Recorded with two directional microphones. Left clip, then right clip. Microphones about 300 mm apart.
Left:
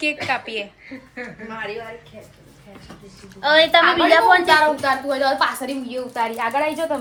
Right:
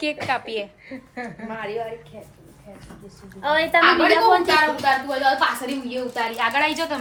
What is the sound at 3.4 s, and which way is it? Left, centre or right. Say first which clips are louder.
Speech: left 5 dB; left.